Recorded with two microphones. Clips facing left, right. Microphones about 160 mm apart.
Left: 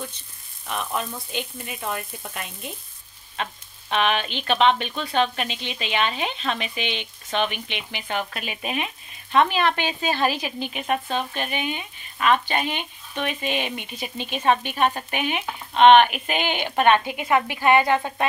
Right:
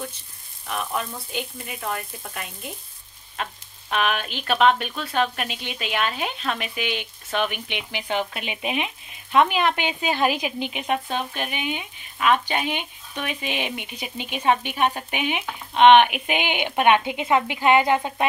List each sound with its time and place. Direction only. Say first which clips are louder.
0.7 s speech: even; centre (ahead or behind)
3.9 s speech: left 2 dB; 5° right (ahead or behind)